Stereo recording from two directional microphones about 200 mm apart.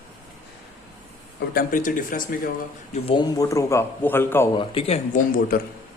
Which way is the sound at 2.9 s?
25° left (ahead or behind).